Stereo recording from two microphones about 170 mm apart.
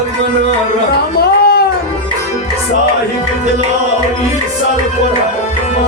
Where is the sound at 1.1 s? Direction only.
70° left (ahead or behind).